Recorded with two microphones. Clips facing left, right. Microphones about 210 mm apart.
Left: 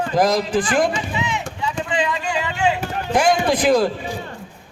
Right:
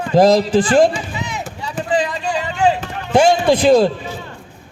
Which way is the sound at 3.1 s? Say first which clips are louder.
Right 5 dB; 25° right (ahead or behind).